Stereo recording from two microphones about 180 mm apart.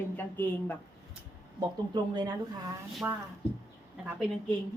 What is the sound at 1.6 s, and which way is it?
Speech, 25° right (ahead or behind).